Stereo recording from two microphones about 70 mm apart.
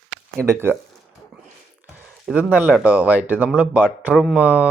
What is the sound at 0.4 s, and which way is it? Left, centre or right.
Speech, right.